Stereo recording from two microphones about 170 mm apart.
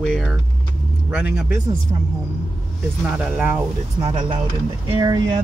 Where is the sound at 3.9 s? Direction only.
25° right (ahead or behind).